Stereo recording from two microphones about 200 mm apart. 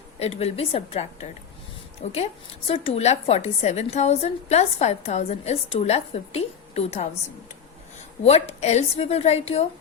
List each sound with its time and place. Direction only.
0.2 s a woman's voice: 30° left (ahead or behind)
8.2 s a woman's voice: 30° left (ahead or behind)